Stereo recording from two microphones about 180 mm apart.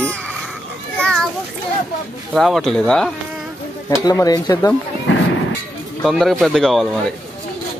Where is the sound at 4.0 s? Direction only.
20° left (ahead or behind).